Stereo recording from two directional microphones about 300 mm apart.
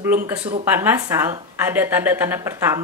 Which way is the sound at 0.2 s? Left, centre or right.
Centre.